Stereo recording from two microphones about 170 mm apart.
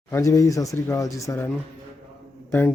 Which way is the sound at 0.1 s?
20° left (ahead or behind).